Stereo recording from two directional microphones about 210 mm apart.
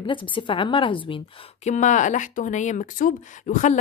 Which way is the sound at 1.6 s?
35° left (ahead or behind).